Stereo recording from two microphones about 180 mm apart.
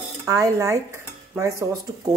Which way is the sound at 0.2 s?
15° right (ahead or behind).